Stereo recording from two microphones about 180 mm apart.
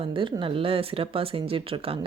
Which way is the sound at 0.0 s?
30° right (ahead or behind).